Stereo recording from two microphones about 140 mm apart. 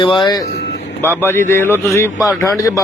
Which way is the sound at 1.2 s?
15° left (ahead or behind).